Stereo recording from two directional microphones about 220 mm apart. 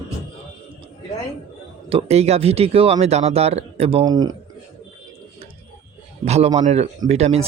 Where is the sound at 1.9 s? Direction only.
30° right (ahead or behind).